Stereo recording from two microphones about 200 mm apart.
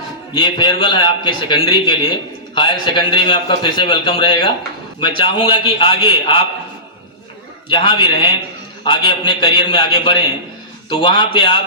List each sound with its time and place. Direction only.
0.3 s a man's voice: 25° left (ahead or behind)
7.7 s a man's voice: 25° left (ahead or behind)